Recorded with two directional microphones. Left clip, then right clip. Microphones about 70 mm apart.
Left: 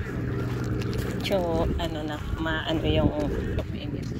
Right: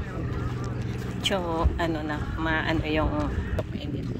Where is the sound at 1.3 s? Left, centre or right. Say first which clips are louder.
Left 1 dB; right.